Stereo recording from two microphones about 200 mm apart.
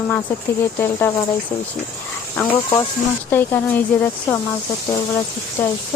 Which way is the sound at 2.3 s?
15° left (ahead or behind).